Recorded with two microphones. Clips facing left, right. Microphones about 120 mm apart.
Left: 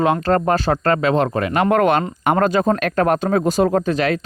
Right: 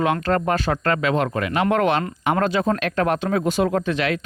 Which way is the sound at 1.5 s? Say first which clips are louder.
Left 4 dB; 50° left (ahead or behind).